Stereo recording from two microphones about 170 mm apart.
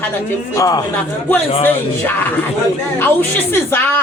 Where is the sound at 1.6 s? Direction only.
10° left (ahead or behind).